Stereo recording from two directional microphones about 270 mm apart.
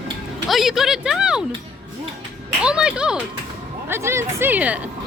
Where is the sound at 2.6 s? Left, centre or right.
Centre.